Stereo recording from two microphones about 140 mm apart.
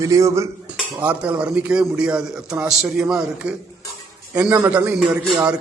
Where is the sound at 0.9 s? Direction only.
10° right (ahead or behind).